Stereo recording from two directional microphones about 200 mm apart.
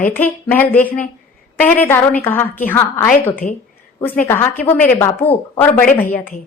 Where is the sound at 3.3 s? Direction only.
45° left (ahead or behind).